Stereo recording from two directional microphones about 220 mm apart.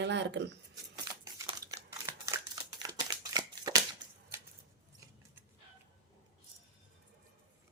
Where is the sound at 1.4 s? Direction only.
20° right (ahead or behind).